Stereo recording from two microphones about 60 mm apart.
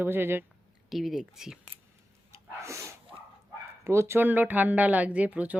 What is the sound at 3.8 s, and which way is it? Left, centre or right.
Speech, right.